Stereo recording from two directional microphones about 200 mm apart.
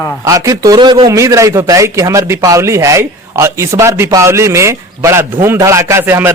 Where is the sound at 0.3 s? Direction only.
15° right (ahead or behind).